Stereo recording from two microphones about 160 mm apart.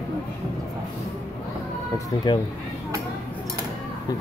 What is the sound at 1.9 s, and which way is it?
Speech, 25° left (ahead or behind).